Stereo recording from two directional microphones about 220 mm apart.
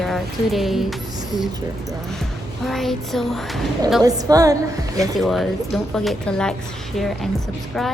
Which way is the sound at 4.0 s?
15° right (ahead or behind).